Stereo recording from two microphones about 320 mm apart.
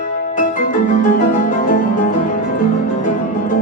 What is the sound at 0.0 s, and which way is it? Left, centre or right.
Music, left.